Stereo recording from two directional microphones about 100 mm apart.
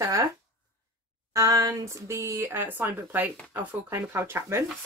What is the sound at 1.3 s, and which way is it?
Speech, 35° right (ahead or behind).